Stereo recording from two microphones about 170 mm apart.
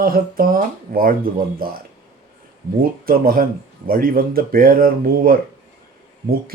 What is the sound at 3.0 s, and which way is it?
Speech, 60° right (ahead or behind).